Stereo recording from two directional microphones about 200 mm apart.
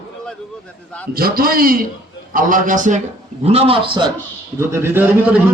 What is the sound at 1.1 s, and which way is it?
A man's voice, 50° right (ahead or behind).